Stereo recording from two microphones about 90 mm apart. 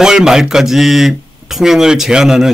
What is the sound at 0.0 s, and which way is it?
Speech, 5° right (ahead or behind).